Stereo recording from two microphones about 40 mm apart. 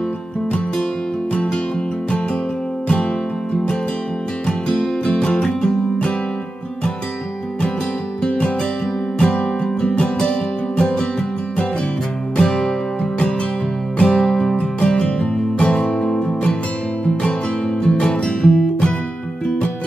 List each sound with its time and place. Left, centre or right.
1.3 s music: left
4.5 s music: centre
8.2 s music: left
12.4 s music: centre
13.9 s music: left
14.6 s music: left